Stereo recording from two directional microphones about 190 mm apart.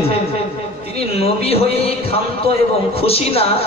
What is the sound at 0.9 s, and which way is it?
A man's voice, 30° left (ahead or behind).